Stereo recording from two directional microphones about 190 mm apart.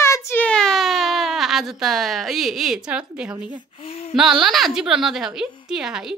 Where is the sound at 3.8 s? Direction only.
30° left (ahead or behind).